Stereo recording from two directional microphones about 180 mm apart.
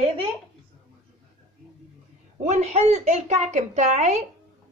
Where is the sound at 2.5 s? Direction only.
40° right (ahead or behind).